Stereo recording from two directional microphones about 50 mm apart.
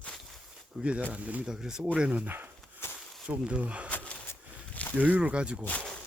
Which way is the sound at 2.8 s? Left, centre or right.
Left.